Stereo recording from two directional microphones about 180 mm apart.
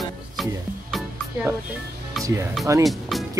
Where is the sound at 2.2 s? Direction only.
Centre (ahead or behind).